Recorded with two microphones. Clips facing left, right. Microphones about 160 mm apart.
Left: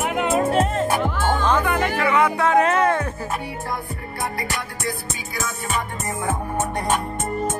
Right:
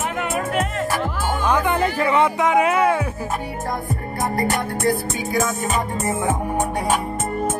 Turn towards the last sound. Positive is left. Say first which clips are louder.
# right 3 dB
turn(degrees=-20)  # may be behind; listen again after turning